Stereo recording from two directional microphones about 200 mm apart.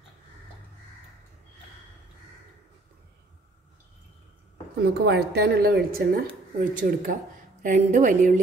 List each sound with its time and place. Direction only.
4.8 s a woman's voice: 55° right (ahead or behind)